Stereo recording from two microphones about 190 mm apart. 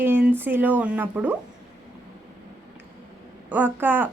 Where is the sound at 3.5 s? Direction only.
10° right (ahead or behind).